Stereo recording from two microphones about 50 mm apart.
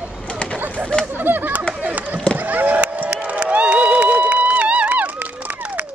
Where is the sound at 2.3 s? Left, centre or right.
Right.